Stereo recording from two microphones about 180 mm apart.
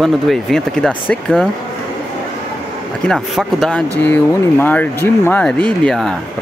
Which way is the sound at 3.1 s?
Centre (ahead or behind).